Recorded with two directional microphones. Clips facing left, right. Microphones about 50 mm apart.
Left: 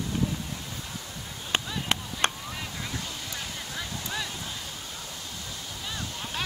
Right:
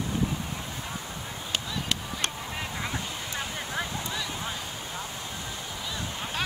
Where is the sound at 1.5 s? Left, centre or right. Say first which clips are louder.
Left 3 dB; left.